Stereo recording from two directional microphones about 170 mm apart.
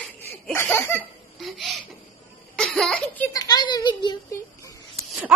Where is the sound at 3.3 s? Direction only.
20° left (ahead or behind).